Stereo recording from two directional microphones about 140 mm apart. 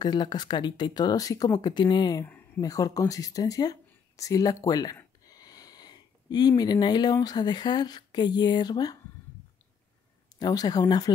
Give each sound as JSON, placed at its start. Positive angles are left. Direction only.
{"t": 0.0, "sound": "speech", "side_deg": 30}
{"t": 2.2, "sound": "a sound", "side_deg": 10}
{"t": 2.6, "sound": "speech", "side_deg": 25}
{"t": 10.4, "sound": "speech", "side_deg": 30}